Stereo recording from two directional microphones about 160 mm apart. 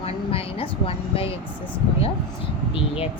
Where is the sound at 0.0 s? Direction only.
35° left (ahead or behind).